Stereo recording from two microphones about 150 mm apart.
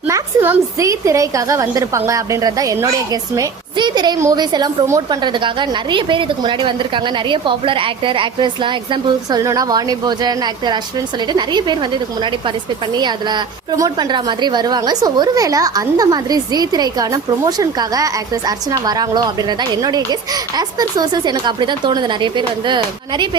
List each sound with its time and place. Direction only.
0.1 s a woman's voice: 15° right (ahead or behind)